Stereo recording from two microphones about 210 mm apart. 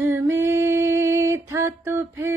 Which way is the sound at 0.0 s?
15° right (ahead or behind).